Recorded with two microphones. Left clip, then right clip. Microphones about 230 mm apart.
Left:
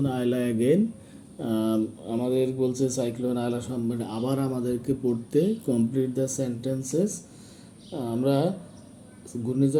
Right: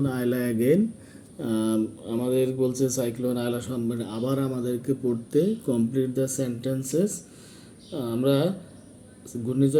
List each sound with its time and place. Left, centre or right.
0.0 s speech: centre